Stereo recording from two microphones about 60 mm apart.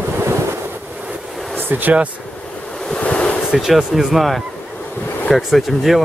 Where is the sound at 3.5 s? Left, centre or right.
Centre.